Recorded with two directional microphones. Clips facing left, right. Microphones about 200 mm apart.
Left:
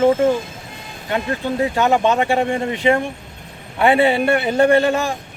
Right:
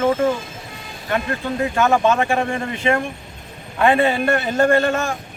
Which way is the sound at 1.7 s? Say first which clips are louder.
Right 1 dB; 20° left (ahead or behind).